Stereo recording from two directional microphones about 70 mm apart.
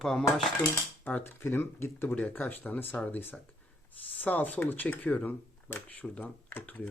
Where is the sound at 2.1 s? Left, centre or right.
Centre.